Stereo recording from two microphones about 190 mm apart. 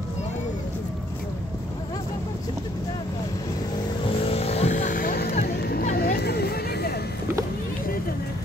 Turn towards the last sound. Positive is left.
turn(degrees=55)  # may be behind; listen again after turning